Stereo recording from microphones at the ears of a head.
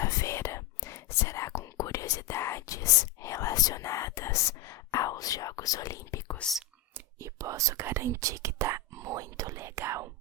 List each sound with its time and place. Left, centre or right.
0.0 s whispering: left
7.2 s whispering: right